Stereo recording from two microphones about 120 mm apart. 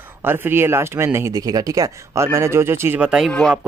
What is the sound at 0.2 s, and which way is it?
Speech, 20° right (ahead or behind).